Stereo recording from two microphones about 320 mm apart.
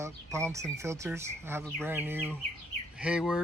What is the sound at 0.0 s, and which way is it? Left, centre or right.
Speech, centre.